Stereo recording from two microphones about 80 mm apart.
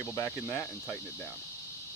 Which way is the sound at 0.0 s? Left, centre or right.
Left.